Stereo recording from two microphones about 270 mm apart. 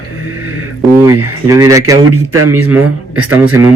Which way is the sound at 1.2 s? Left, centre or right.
Right.